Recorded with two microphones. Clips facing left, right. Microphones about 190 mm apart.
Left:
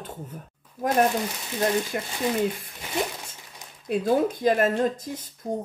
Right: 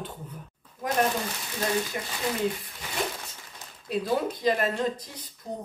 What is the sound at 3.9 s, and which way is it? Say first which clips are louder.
A man's voice: left 5 dB; 50° left (ahead or behind).